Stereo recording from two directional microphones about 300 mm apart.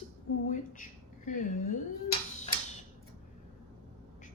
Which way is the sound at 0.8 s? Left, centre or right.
Left.